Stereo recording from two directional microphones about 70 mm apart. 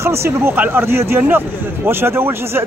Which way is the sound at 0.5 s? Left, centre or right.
Right.